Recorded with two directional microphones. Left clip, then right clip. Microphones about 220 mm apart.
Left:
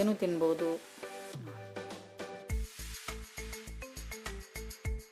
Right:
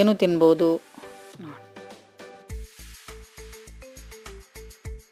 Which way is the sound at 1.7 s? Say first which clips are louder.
Even; centre (ahead or behind).